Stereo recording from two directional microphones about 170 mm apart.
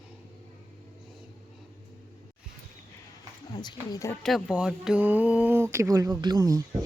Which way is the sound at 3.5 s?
25° left (ahead or behind).